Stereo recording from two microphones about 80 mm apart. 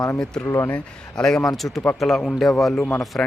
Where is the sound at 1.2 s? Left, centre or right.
Centre.